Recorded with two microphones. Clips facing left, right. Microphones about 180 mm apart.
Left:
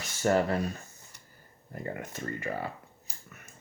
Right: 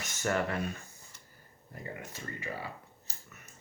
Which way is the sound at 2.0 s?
55° left (ahead or behind).